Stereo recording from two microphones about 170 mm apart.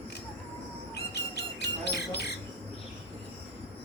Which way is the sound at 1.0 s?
75° left (ahead or behind).